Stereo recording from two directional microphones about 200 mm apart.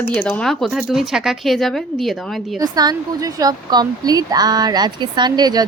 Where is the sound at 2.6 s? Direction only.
20° right (ahead or behind).